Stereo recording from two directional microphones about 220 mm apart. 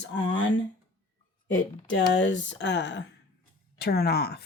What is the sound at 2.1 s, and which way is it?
Speech, 55° left (ahead or behind).